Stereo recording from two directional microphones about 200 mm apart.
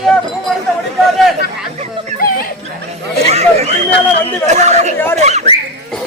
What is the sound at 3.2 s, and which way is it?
Chatter, 30° right (ahead or behind).